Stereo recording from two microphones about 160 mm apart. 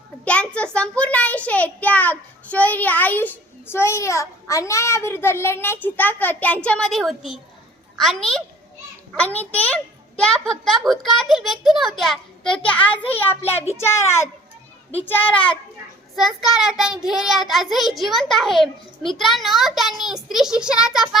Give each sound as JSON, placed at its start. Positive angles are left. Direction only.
{"t": 0.3, "sound": "a child's voice", "side_deg": 10}
{"t": 16.1, "sound": "a child's voice", "side_deg": 0}